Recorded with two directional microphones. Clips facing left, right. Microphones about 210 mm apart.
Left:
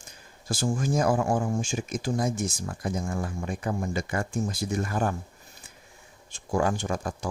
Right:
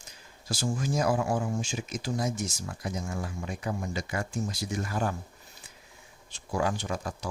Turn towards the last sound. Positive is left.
turn(degrees=50)  # may be behind; listen again after turning